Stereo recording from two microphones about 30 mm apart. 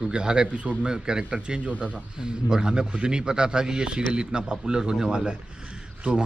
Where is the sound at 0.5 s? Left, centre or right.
Right.